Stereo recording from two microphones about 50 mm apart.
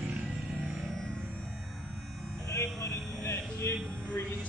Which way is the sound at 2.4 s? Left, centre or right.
Left.